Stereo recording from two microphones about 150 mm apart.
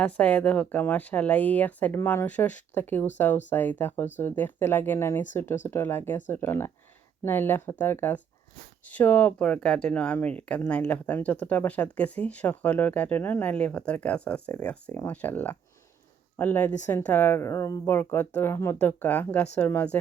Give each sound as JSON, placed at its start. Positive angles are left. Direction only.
{"t": 0.0, "sound": "speech", "side_deg": 10}